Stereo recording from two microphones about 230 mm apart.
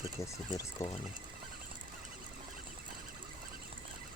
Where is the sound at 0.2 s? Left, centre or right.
Centre.